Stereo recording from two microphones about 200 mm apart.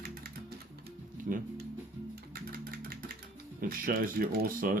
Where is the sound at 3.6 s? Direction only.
45° right (ahead or behind).